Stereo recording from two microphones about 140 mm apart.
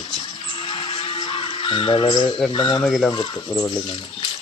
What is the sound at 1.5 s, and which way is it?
Speech, 40° left (ahead or behind).